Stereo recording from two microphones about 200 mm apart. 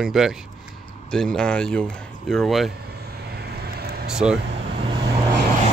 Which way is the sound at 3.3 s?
55° right (ahead or behind).